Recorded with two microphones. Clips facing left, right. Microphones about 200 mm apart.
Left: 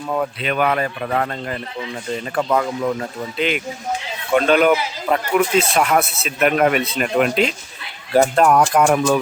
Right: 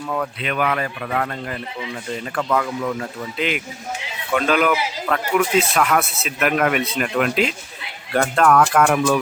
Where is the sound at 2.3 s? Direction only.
20° left (ahead or behind).